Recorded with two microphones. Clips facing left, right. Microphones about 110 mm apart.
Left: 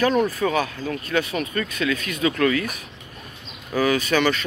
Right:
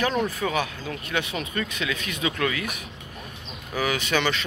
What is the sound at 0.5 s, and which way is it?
Speech, 15° right (ahead or behind).